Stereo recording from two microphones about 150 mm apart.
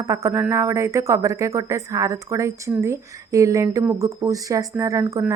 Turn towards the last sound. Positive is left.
turn(degrees=-20)  # may be behind; listen again after turning